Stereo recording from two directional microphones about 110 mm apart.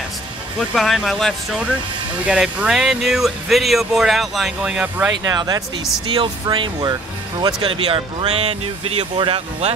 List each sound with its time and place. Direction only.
0.6 s speech: centre (ahead or behind); by 5.1 s 15° right (ahead or behind)
5.2 s speech: 35° right (ahead or behind)
6.0 s speech: 50° right (ahead or behind)
7.6 s speech: 55° right (ahead or behind)
9.1 s speech: 50° right (ahead or behind)